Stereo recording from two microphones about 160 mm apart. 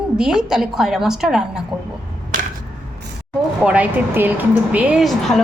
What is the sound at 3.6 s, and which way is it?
A woman's voice, 5° right (ahead or behind).